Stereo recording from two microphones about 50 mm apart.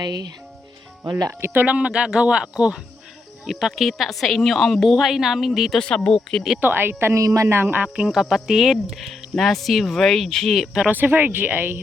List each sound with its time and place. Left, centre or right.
1.1 s speech: right
1.6 s speech: right
3.4 s speech: centre
6.1 s speech: centre
6.6 s speech: right
7.1 s speech: right
7.4 s speech: right
7.9 s speech: centre
10.9 s speech: right